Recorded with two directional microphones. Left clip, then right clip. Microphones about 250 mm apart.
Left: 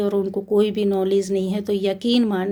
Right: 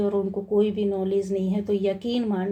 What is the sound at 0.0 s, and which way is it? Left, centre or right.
Speech, left.